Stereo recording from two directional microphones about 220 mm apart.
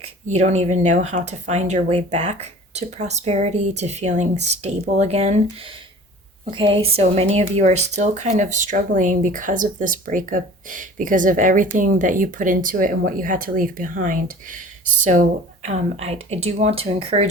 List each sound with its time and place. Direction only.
0.0 s speech: 30° right (ahead or behind)